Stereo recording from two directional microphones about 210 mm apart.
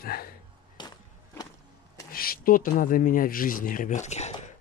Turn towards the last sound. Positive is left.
turn(degrees=30)  # may be behind; listen again after turning